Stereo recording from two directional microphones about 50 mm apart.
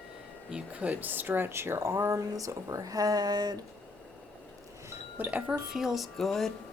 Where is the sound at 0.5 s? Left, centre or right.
Right.